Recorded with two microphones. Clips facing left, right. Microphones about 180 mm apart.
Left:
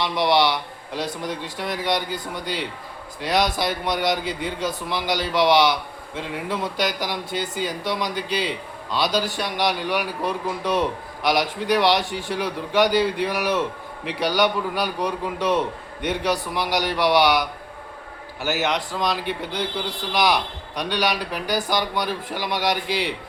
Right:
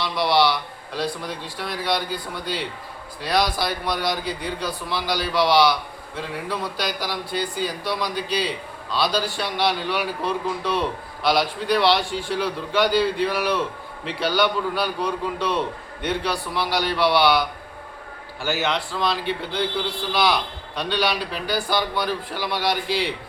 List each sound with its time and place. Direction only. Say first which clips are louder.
0.0 s a man's voice: left 1 dB; 20° left (ahead or behind)
18.4 s speech: left 1 dB; 15° left (ahead or behind)
20.7 s speech: even; 15° left (ahead or behind)